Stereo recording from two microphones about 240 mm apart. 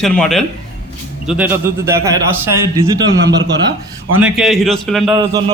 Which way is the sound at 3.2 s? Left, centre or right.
Right.